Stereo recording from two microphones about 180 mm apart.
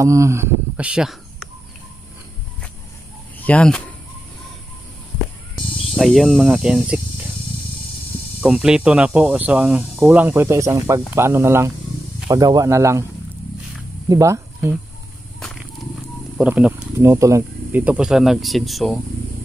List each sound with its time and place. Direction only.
0.0 s speech: 15° right (ahead or behind)
3.4 s speech: 5° left (ahead or behind)
5.9 s speech: centre (ahead or behind)
8.4 s speech: 5° right (ahead or behind)
14.0 s speech: 15° right (ahead or behind)
15.4 s wild animals: 5° left (ahead or behind)
16.3 s speech: 5° right (ahead or behind)